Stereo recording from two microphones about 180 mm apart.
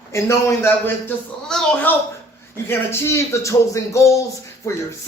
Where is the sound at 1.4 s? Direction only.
5° left (ahead or behind).